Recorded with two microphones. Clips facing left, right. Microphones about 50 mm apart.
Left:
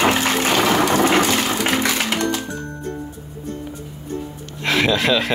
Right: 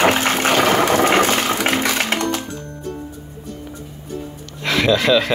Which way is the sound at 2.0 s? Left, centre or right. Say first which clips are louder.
Right 1 dB; right.